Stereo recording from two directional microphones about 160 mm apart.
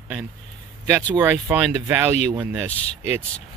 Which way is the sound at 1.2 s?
10° right (ahead or behind).